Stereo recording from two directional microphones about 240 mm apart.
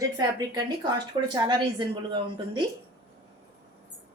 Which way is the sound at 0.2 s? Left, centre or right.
Centre.